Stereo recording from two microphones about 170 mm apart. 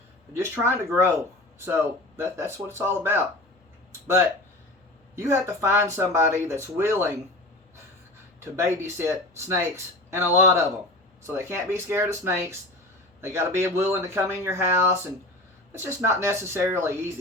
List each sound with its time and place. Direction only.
0.6 s speech: 15° right (ahead or behind)
5.1 s speech: 15° right (ahead or behind)
8.5 s speech: 15° right (ahead or behind)